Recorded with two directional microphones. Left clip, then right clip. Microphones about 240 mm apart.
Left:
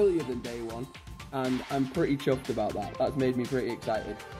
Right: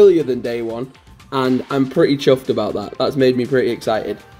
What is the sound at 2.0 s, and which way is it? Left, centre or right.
Speech, centre.